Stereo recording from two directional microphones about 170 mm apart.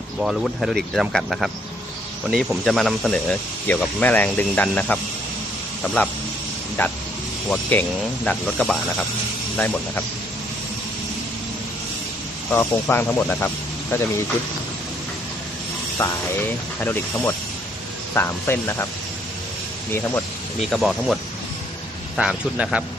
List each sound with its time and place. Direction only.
0.2 s speech: centre (ahead or behind)
12.5 s speech: 10° left (ahead or behind)
16.0 s speech: 15° left (ahead or behind)
20.6 s speech: centre (ahead or behind)